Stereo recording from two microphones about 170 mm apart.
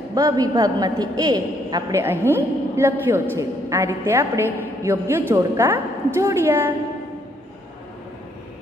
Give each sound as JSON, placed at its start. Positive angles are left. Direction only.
{"t": 0.1, "sound": "a man's voice", "side_deg": -20}